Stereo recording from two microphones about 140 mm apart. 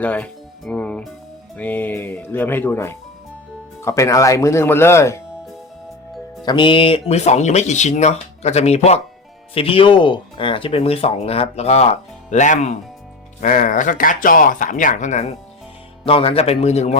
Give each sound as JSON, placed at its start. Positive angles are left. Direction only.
{"t": 0.0, "sound": "music", "side_deg": 10}
{"t": 1.5, "sound": "speech", "side_deg": 10}
{"t": 6.4, "sound": "speech", "side_deg": 35}
{"t": 13.4, "sound": "speech", "side_deg": 70}
{"t": 16.0, "sound": "speech", "side_deg": 40}